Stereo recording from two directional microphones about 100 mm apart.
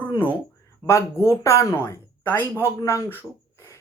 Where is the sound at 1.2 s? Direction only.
30° left (ahead or behind).